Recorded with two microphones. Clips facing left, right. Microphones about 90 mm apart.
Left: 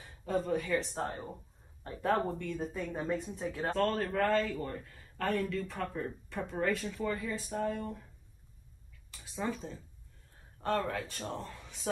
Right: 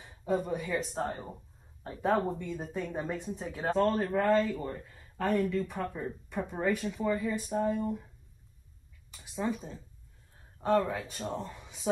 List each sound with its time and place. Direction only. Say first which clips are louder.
0.0 s speech: right 2 dB; 15° right (ahead or behind)
9.5 s speech: right 2 dB; 10° right (ahead or behind)